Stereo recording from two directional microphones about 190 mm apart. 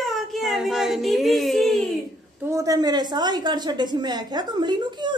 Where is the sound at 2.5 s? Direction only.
15° right (ahead or behind).